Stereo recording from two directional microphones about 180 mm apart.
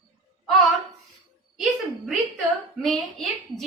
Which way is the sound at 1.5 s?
Centre (ahead or behind).